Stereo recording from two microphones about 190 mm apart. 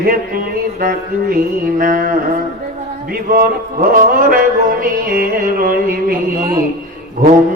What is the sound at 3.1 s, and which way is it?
Mantra, 50° right (ahead or behind).